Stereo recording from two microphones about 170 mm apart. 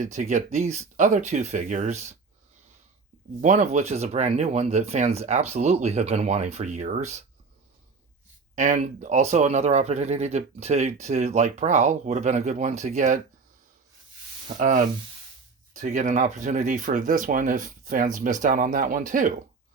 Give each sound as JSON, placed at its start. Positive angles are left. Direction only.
{"t": 0.0, "sound": "speech", "side_deg": -45}
{"t": 3.4, "sound": "speech", "side_deg": -45}
{"t": 8.5, "sound": "speech", "side_deg": -45}
{"t": 14.4, "sound": "speech", "side_deg": -45}